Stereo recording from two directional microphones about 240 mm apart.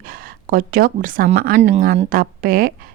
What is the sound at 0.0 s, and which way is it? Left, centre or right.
Speech, right.